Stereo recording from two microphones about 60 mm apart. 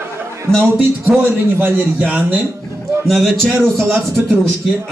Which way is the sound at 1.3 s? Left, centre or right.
Right.